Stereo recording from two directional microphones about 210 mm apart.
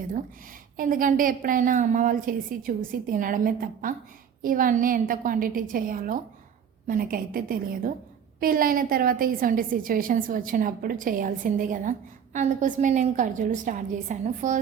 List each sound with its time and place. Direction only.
0.8 s a woman's voice: 40° right (ahead or behind)